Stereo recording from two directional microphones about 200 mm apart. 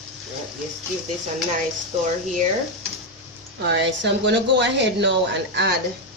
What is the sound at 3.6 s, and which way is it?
Speech, 60° right (ahead or behind).